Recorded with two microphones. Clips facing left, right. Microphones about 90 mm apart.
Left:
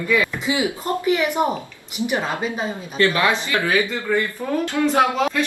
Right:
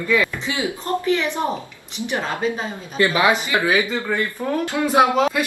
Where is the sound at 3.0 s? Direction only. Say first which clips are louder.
Right 1 dB; 15° right (ahead or behind).